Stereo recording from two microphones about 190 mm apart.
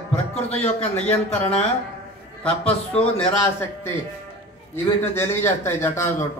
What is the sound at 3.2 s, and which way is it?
Speech, 10° left (ahead or behind).